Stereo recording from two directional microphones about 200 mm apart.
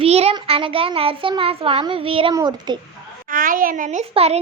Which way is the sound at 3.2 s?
45° right (ahead or behind).